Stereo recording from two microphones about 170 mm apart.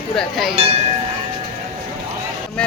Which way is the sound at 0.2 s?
Centre (ahead or behind).